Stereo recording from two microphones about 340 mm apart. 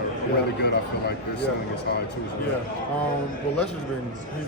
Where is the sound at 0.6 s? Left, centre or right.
Left.